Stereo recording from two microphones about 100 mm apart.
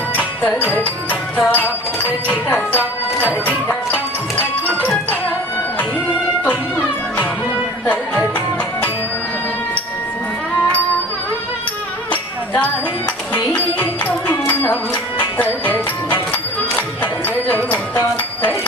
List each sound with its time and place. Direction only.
0.2 s music: 15° left (ahead or behind)
6.4 s music: 15° left (ahead or behind)
13.3 s music: 15° left (ahead or behind)
15.4 s speech: 20° left (ahead or behind)
17.0 s music: 15° left (ahead or behind)